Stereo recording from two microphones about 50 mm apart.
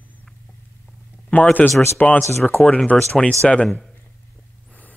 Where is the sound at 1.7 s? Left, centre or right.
Left.